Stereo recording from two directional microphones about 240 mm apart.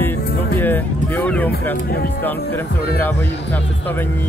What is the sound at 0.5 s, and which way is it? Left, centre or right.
Speech, centre.